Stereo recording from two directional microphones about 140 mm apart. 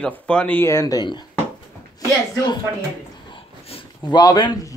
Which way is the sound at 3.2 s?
40° left (ahead or behind).